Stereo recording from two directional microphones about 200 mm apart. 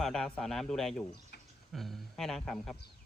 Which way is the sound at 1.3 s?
55° left (ahead or behind).